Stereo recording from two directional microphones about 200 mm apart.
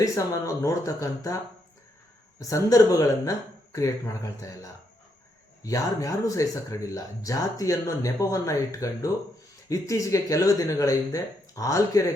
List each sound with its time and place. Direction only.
0.0 s speech: 15° left (ahead or behind)
2.4 s speech: 15° left (ahead or behind)